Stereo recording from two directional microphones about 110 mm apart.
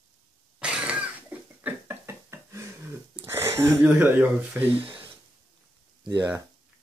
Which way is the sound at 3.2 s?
25° right (ahead or behind).